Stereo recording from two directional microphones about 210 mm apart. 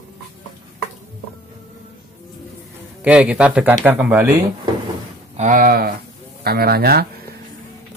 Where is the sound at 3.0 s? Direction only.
5° right (ahead or behind).